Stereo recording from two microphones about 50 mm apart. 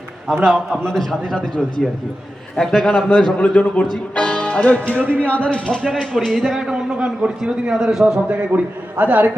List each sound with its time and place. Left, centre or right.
0.3 s a man's voice: centre
2.6 s a man's voice: centre
2.9 s speech: left
5.0 s a man's voice: right
5.3 s a man's voice: left; by 6.5 s centre
6.7 s a man's voice: centre
8.3 s a man's voice: right